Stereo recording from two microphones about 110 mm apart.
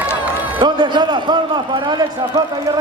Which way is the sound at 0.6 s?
45° right (ahead or behind).